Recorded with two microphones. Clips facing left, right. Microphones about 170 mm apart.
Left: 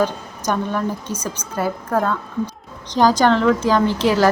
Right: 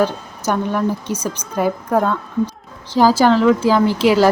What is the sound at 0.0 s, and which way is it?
Speech, 10° right (ahead or behind).